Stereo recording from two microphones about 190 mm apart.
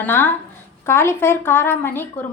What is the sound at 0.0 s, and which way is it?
A woman's voice, 10° left (ahead or behind).